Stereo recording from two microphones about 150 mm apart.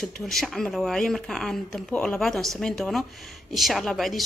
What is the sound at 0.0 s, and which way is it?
A woman's voice, centre (ahead or behind).